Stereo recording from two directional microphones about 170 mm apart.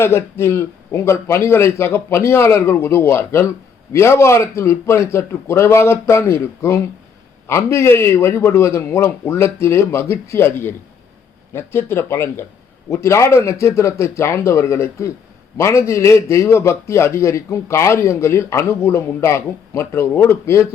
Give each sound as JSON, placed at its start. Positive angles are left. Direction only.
{"t": 0.0, "sound": "a man's voice", "side_deg": 15}